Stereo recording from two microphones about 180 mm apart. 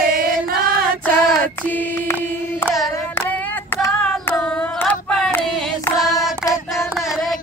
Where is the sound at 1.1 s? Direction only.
10° left (ahead or behind).